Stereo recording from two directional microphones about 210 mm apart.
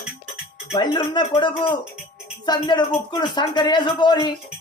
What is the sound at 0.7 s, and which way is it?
Speech, 20° left (ahead or behind).